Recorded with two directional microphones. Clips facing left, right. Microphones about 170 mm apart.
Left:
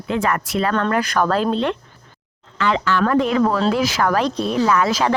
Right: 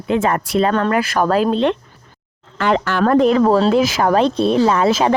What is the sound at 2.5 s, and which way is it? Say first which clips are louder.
Speech: right 2 dB; 50° right (ahead or behind).